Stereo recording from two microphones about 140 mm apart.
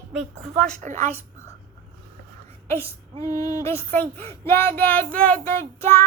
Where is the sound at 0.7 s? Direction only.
60° right (ahead or behind).